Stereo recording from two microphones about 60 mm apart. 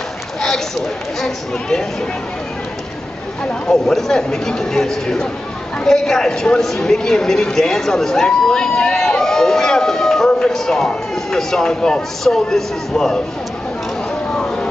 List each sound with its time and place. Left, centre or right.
1.2 s speech: centre
3.6 s speech: centre
14.3 s a sound: centre